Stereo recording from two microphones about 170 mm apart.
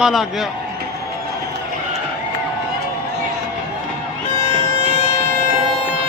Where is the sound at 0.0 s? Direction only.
Centre (ahead or behind).